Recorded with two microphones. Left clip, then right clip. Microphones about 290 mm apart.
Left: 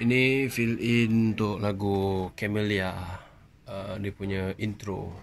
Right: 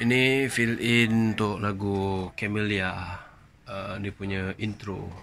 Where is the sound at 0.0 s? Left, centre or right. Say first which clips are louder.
Right 1 dB; centre.